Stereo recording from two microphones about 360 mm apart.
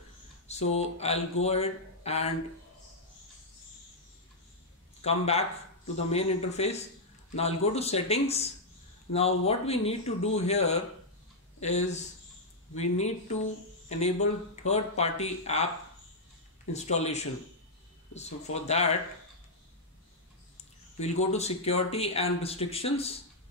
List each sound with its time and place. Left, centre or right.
0.5 s speech: centre
5.0 s speech: centre
16.7 s speech: centre
21.0 s speech: centre